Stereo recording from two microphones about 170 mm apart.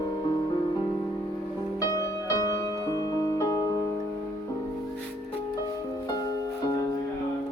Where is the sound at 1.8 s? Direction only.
20° left (ahead or behind).